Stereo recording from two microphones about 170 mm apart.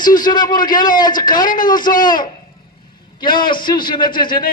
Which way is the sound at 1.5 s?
55° left (ahead or behind).